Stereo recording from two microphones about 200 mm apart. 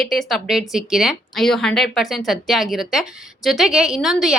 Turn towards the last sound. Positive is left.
turn(degrees=0)  # may be behind; listen again after turning